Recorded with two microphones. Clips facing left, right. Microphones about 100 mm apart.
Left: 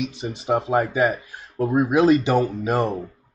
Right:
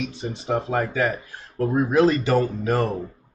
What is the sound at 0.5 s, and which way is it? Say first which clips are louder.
Speech: left 3 dB; 30° left (ahead or behind).